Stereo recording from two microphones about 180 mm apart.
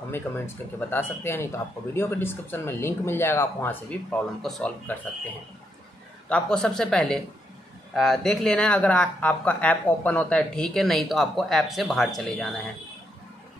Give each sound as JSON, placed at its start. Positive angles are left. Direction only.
{"t": 0.3, "sound": "speech", "side_deg": 20}
{"t": 6.2, "sound": "speech", "side_deg": 5}